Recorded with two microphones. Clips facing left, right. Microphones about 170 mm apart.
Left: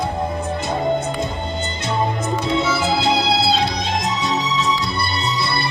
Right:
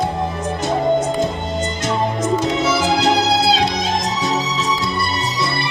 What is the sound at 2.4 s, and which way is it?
Music, 90° right.